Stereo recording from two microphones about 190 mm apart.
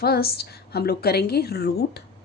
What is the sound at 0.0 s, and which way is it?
A woman's voice, 55° left (ahead or behind).